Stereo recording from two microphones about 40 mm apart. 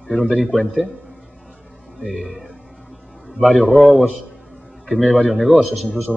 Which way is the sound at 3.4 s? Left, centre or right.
Centre.